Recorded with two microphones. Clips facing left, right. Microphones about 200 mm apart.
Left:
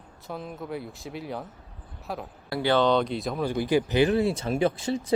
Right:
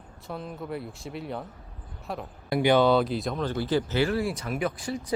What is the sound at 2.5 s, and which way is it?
Speech, 15° right (ahead or behind).